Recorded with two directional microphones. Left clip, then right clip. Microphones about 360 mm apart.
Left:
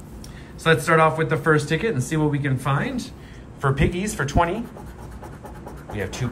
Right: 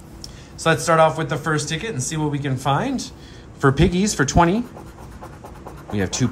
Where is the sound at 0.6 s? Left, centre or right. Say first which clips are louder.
Right 1 dB; centre.